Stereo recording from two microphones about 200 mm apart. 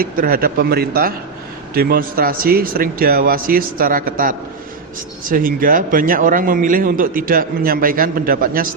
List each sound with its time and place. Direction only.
0.0 s speech: 45° right (ahead or behind)